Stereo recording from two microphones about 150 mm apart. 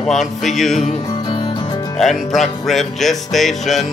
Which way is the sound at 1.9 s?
Centre (ahead or behind).